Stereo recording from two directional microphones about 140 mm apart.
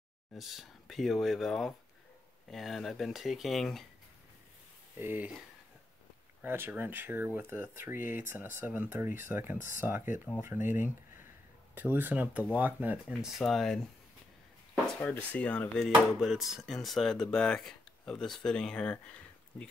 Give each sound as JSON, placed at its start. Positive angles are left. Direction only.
{"t": 0.3, "sound": "speech", "side_deg": 0}
{"t": 4.9, "sound": "speech", "side_deg": -15}
{"t": 6.4, "sound": "speech", "side_deg": -15}
{"t": 10.6, "sound": "speech", "side_deg": 65}
{"t": 11.7, "sound": "speech", "side_deg": -15}
{"t": 13.4, "sound": "speech", "side_deg": 0}
{"t": 15.0, "sound": "speech", "side_deg": 10}
{"t": 15.9, "sound": "speech", "side_deg": 0}